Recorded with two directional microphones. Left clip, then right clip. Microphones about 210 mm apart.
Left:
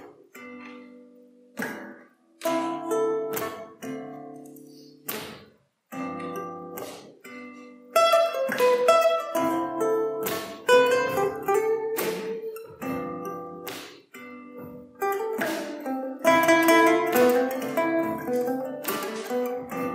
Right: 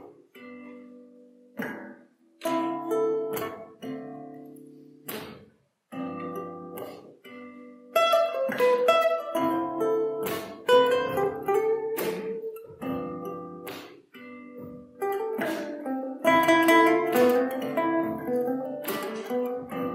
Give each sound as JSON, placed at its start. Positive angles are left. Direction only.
{"t": 1.6, "sound": "music", "side_deg": -20}